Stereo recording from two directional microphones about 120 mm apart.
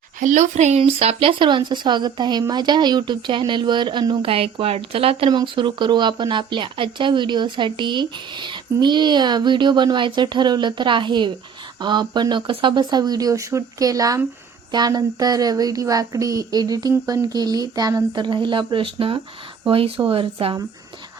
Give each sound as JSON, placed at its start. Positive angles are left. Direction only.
{"t": 0.2, "sound": "speech", "side_deg": -90}
{"t": 0.8, "sound": "a woman's voice", "side_deg": -55}
{"t": 5.3, "sound": "a woman's voice", "side_deg": -40}